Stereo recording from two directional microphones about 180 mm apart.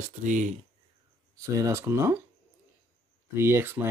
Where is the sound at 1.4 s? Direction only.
15° right (ahead or behind).